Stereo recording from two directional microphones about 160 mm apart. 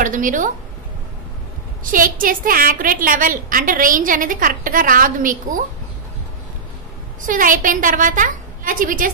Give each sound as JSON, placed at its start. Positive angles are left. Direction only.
{"t": 0.0, "sound": "a woman's voice", "side_deg": -55}
{"t": 1.9, "sound": "a woman's voice", "side_deg": -60}
{"t": 7.2, "sound": "a woman's voice", "side_deg": -55}